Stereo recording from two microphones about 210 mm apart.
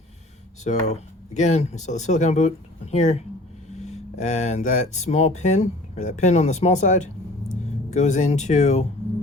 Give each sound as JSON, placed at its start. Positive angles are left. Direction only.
{"t": 0.6, "sound": "speech", "side_deg": 30}